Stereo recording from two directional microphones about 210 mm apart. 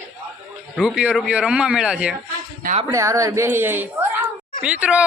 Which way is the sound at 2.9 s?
15° right (ahead or behind).